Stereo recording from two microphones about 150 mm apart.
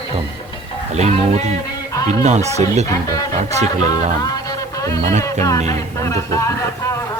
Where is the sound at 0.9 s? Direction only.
50° right (ahead or behind).